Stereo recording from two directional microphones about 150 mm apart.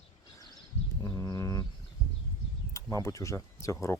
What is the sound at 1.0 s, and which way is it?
Bird, 20° left (ahead or behind).